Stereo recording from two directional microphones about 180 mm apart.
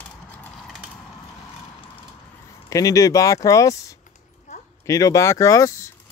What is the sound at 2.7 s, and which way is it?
Speech, 20° left (ahead or behind).